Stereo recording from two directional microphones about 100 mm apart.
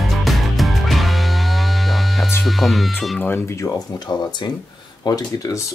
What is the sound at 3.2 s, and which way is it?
Speech, 20° left (ahead or behind).